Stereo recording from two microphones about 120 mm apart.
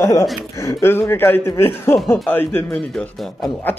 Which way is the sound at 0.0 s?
25° left (ahead or behind).